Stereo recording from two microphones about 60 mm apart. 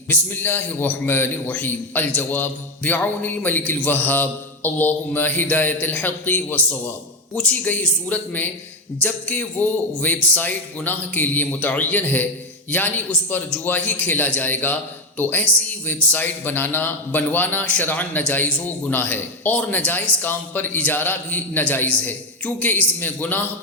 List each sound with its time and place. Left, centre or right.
0.1 s a man's voice: left
13.3 s a man's voice: left